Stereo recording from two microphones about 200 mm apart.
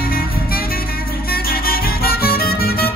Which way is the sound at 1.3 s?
50° left (ahead or behind).